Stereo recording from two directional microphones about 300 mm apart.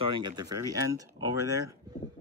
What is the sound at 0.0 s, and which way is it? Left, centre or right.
A man's voice, centre.